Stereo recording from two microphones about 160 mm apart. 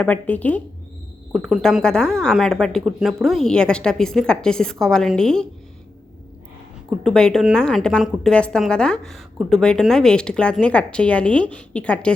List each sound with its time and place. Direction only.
0.0 s a woman's voice: 10° left (ahead or behind)
7.0 s a woman's voice: 5° left (ahead or behind)